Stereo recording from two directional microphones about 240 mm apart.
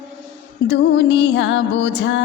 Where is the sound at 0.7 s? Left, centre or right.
Left.